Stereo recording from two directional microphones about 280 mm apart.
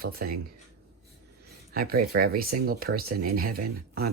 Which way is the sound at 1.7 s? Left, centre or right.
Right.